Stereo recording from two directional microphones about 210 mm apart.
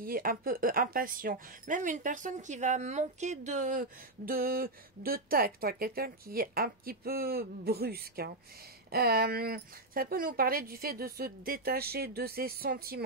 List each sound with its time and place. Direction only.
0.0 s speech: 45° right (ahead or behind)